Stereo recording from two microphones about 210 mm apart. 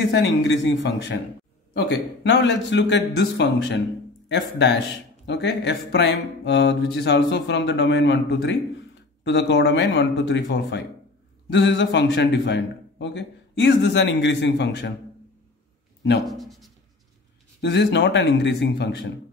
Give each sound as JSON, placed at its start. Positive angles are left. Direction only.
{"t": 0.0, "sound": "speech", "side_deg": 55}
{"t": 16.3, "sound": "a sound", "side_deg": 0}
{"t": 17.6, "sound": "speech", "side_deg": 55}